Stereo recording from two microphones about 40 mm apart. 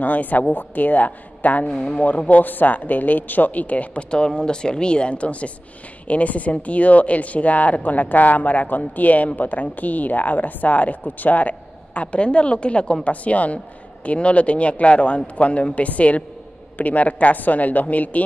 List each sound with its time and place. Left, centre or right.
0.0 s speech: left
4.1 s speech: left
13.0 s speech: left